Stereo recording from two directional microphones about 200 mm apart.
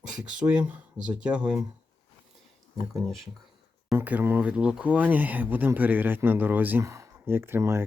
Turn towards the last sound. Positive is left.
turn(degrees=-15)  # may be behind; listen again after turning